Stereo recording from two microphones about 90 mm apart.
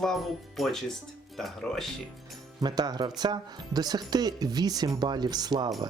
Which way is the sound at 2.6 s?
50° right (ahead or behind).